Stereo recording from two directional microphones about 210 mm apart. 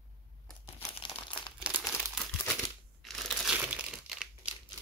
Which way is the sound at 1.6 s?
5° right (ahead or behind).